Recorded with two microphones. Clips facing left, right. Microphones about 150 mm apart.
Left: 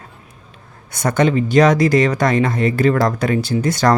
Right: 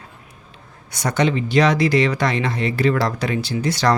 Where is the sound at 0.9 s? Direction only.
50° left (ahead or behind).